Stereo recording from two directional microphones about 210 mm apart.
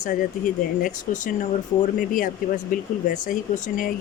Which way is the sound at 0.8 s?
35° left (ahead or behind).